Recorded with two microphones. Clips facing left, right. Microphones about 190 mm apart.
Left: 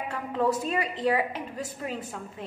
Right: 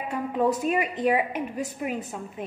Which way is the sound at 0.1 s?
15° right (ahead or behind).